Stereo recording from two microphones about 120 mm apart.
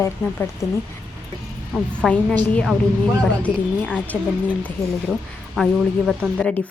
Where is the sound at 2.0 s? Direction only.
5° right (ahead or behind).